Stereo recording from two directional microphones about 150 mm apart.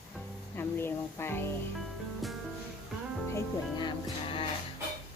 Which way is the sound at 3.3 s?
30° left (ahead or behind).